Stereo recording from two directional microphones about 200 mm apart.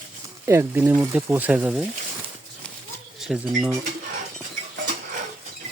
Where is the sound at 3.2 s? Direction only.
Centre (ahead or behind).